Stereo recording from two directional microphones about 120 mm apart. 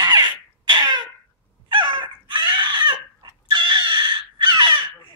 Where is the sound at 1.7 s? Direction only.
40° right (ahead or behind).